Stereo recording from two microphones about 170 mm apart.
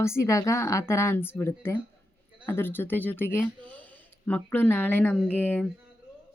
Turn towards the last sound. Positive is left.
turn(degrees=10)  # may be behind; listen again after turning